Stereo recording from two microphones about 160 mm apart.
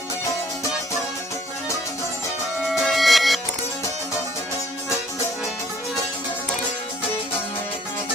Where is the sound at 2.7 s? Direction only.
Centre (ahead or behind).